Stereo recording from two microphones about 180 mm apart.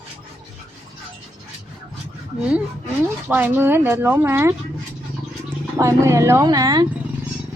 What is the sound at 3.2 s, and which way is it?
Speech, 10° right (ahead or behind).